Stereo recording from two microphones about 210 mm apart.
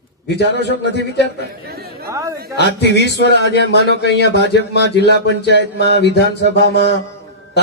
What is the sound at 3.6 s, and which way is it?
Speech, 55° right (ahead or behind).